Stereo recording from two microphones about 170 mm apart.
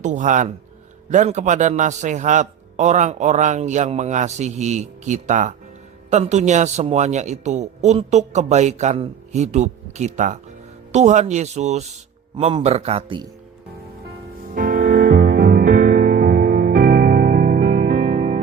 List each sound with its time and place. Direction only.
0.0 s a man's voice: 45° right (ahead or behind)
14.5 s music: 55° right (ahead or behind)
15.2 s music: 70° right (ahead or behind); by 18.3 s 45° right (ahead or behind)